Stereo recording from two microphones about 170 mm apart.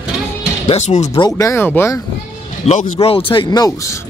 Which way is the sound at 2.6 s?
40° left (ahead or behind).